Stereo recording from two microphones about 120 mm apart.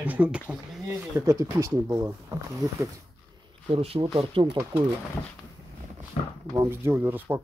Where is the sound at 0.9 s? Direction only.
25° right (ahead or behind).